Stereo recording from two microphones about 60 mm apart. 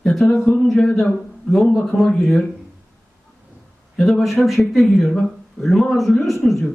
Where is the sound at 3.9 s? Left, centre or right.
Centre.